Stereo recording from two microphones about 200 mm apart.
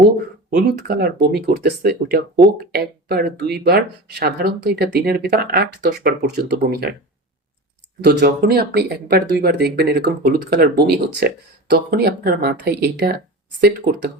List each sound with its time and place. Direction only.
0.5 s speech: 55° right (ahead or behind)
8.0 s speech: 55° right (ahead or behind)